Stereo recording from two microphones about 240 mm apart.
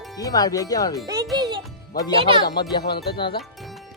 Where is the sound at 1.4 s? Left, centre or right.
Centre.